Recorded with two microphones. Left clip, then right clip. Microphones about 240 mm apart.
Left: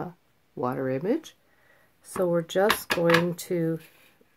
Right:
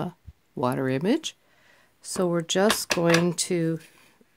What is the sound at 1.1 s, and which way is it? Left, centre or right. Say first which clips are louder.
Speech: right 2 dB; right.